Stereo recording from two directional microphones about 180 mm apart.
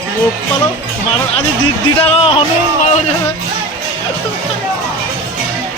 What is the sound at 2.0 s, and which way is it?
Speech, 30° left (ahead or behind).